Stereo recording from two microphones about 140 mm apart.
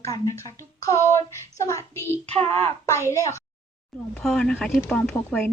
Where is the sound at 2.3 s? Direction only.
10° left (ahead or behind).